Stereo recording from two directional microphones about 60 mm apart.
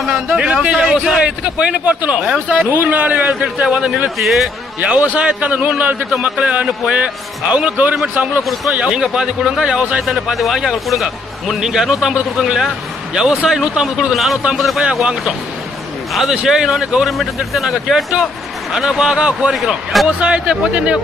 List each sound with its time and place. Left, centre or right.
0.3 s a man's voice: right
4.2 s a man's voice: centre
4.7 s a man's voice: right
10.0 s a man's voice: centre
16.1 s a man's voice: centre
19.5 s a man's voice: centre
20.2 s a man's voice: centre